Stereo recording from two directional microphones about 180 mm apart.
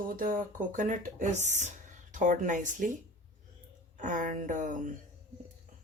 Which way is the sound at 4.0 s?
45° right (ahead or behind).